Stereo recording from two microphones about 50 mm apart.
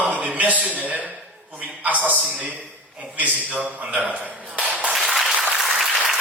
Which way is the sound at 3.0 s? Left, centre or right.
Right.